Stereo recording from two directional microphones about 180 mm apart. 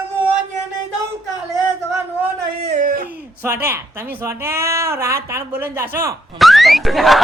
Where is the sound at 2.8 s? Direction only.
55° right (ahead or behind).